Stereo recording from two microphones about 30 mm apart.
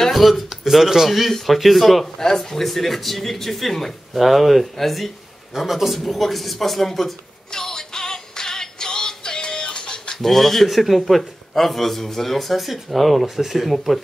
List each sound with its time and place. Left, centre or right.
0.1 s a sound: centre
0.7 s a man's voice: centre
2.1 s a man's voice: centre
5.6 s a man's voice: centre
7.5 s music: centre
10.1 s a man's voice: centre
13.4 s a man's voice: centre